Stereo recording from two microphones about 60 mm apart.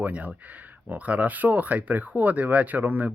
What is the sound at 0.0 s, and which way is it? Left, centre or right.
Speech, right.